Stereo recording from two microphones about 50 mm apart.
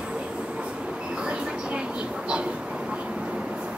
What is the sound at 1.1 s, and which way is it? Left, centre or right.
Vehicle, centre.